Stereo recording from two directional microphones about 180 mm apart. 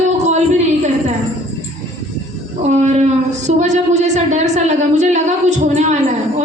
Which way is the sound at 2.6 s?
40° right (ahead or behind).